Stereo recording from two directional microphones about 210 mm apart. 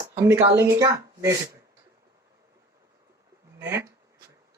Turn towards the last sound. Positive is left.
turn(degrees=-10)  # may be behind; listen again after turning